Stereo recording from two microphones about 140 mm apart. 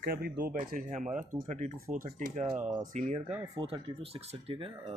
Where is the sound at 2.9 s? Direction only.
55° right (ahead or behind).